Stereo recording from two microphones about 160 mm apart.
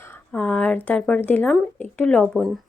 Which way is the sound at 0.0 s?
10° left (ahead or behind).